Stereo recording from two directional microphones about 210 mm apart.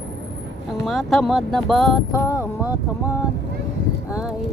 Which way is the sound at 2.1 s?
15° left (ahead or behind).